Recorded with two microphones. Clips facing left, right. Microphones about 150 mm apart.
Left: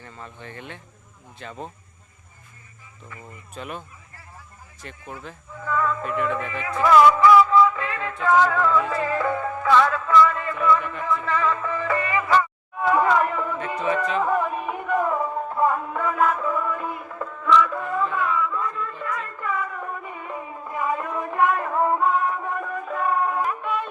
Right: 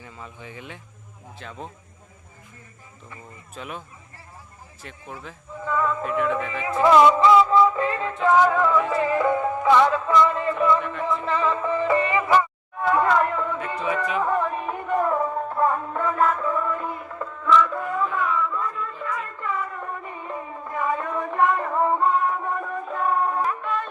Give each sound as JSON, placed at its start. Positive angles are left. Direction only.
{"t": 0.0, "sound": "speech", "side_deg": -5}
{"t": 3.5, "sound": "speech", "side_deg": 0}
{"t": 5.5, "sound": "a sound", "side_deg": -20}
{"t": 6.0, "sound": "speech", "side_deg": 0}
{"t": 6.5, "sound": "music", "side_deg": -30}
{"t": 8.4, "sound": "music", "side_deg": -20}
{"t": 12.8, "sound": "a sound", "side_deg": 5}
{"t": 13.8, "sound": "music", "side_deg": -5}
{"t": 14.2, "sound": "music", "side_deg": 5}
{"t": 23.5, "sound": "music", "side_deg": 10}